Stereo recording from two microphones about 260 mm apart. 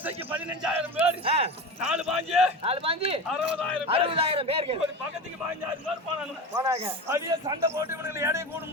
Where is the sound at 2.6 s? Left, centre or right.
Right.